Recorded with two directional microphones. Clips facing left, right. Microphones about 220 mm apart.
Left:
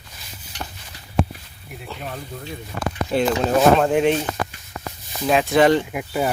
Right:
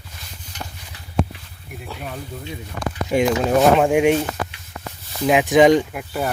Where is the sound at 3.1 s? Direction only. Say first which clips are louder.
Right 2 dB; 10° right (ahead or behind).